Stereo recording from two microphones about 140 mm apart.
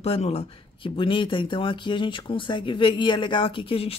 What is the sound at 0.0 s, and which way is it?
Speech, 45° left (ahead or behind).